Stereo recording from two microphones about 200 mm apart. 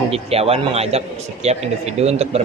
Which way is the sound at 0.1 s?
30° right (ahead or behind).